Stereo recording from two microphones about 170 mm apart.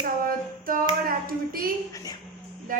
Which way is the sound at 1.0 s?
55° right (ahead or behind).